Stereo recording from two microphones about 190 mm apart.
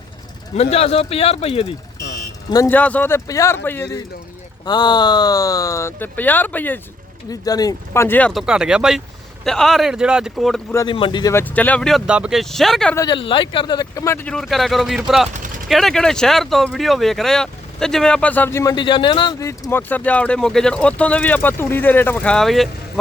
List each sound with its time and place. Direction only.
0.5 s speech: 35° left (ahead or behind)
2.5 s speech: 15° left (ahead or behind)
10.8 s speech: 25° left (ahead or behind); by 13.0 s 5° left (ahead or behind)
13.0 s speech: 25° left (ahead or behind); by 22.7 s centre (ahead or behind)